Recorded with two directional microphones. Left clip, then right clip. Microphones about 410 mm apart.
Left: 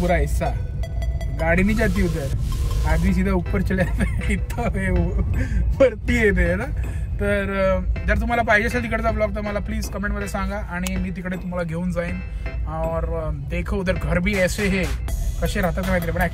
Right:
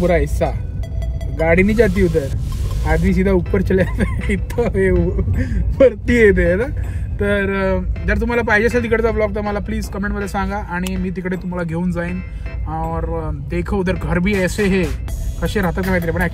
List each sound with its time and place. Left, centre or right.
0.0 s speech: centre
1.6 s speech: centre
13.5 s speech: centre